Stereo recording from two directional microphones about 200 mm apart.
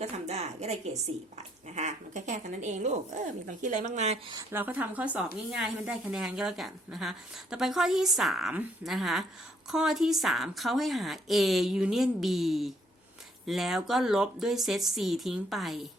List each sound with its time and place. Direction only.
0.0 s a woman's voice: 35° right (ahead or behind)
4.3 s speech: 15° right (ahead or behind)